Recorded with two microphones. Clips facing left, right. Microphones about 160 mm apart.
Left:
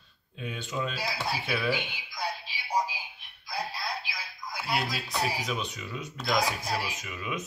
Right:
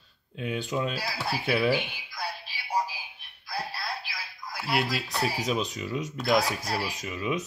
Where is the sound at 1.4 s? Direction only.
35° right (ahead or behind).